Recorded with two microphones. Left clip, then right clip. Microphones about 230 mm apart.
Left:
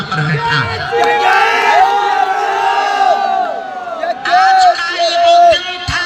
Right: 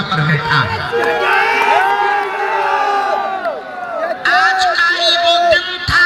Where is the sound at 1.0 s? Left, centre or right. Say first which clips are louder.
Left 4 dB; left.